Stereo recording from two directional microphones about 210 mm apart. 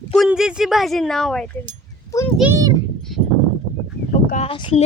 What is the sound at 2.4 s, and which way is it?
Speech, 15° right (ahead or behind).